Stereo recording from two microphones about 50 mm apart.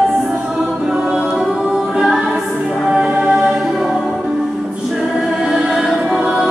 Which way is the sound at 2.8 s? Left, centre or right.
Centre.